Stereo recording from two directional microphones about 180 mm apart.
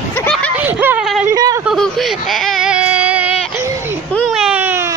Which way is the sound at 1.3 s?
20° right (ahead or behind).